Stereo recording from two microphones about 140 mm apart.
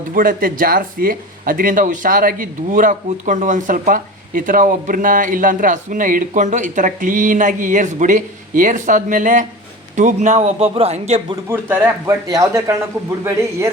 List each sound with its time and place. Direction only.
0.1 s a man's voice: 90° right; by 11.2 s 50° right (ahead or behind)
11.4 s speech: 15° right (ahead or behind)